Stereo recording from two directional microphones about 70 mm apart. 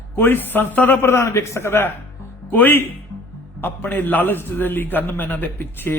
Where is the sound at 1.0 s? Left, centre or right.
Left.